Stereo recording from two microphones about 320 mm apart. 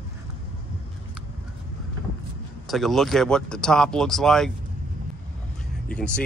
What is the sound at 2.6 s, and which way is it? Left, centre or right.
Speech, centre.